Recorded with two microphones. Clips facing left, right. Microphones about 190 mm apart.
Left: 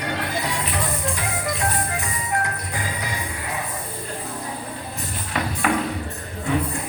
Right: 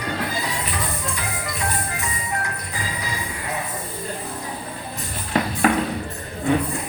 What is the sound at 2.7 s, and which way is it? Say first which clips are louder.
Train: right 1 dB; 60° left (ahead or behind).